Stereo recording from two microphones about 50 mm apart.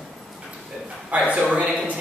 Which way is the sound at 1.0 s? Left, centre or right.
Right.